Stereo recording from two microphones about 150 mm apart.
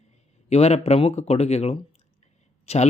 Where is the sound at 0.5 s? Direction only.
45° left (ahead or behind).